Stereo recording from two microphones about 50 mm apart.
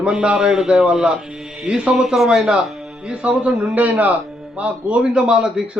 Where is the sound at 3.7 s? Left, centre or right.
Right.